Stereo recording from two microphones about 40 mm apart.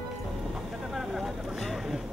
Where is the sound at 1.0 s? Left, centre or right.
Centre.